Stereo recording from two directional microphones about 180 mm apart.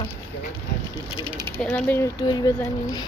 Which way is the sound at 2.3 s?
25° left (ahead or behind).